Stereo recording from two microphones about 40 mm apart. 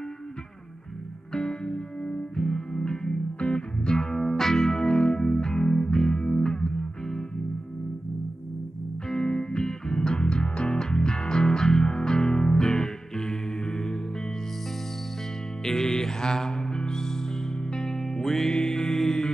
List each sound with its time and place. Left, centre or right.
1.3 s music: left
9.1 s music: centre
15.6 s music: centre